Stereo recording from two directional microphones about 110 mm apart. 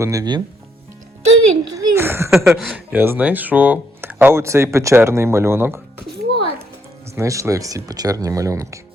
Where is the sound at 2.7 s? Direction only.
15° right (ahead or behind).